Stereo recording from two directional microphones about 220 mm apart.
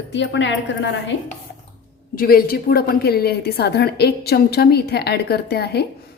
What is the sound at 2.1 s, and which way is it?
A woman's voice, 40° left (ahead or behind).